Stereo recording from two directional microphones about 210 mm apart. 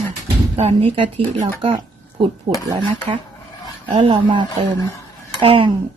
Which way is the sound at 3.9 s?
25° right (ahead or behind).